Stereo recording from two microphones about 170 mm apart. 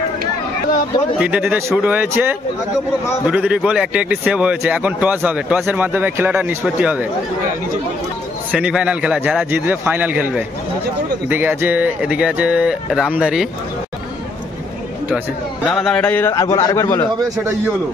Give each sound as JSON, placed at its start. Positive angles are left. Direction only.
{"t": 1.2, "sound": "speech", "side_deg": -5}
{"t": 8.5, "sound": "speech", "side_deg": -5}
{"t": 15.7, "sound": "a man's voice", "side_deg": 5}